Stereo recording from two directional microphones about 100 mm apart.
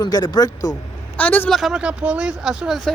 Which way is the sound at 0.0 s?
40° left (ahead or behind).